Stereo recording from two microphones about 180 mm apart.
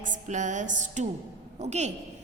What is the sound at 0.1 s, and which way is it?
A woman's voice, 45° right (ahead or behind).